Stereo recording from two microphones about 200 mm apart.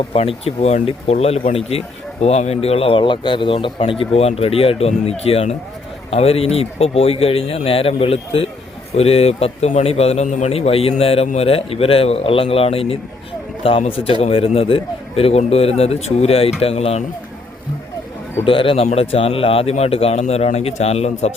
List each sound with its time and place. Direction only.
0.1 s a man's voice: 30° left (ahead or behind)
18.4 s speech: 25° left (ahead or behind)